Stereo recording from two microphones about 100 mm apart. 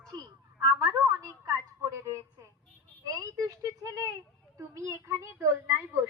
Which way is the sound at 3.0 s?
40° right (ahead or behind).